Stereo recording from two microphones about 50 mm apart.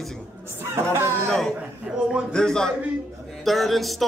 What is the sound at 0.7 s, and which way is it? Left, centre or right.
Speech, right.